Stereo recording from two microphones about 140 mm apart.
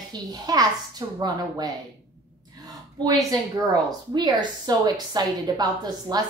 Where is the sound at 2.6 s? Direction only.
25° right (ahead or behind).